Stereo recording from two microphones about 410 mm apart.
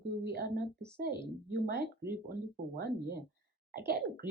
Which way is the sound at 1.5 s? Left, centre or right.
Right.